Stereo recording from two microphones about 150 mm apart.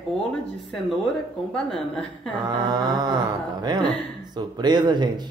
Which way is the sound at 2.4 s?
30° right (ahead or behind).